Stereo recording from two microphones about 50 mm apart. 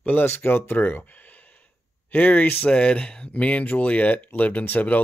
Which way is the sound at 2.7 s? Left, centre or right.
Left.